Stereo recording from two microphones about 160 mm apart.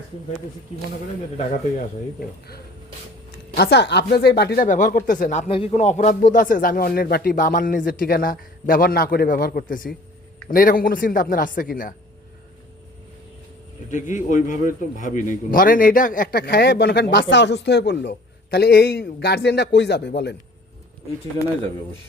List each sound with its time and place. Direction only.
3.5 s speech: 90° left; by 5.5 s 50° left (ahead or behind)
5.5 s a man's voice: 35° left (ahead or behind)
5.7 s speech: 45° left (ahead or behind)
14.3 s a man's voice: 50° left (ahead or behind); by 20.3 s 90° left